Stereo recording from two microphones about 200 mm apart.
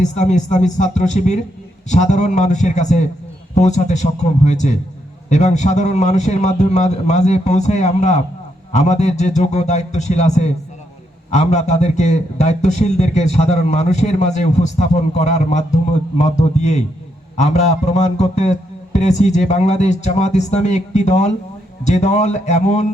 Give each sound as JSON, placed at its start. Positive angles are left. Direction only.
{"t": 0.0, "sound": "a man's voice", "side_deg": 35}